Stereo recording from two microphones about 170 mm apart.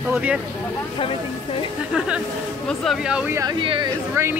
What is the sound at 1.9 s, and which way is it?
Speech, 5° right (ahead or behind).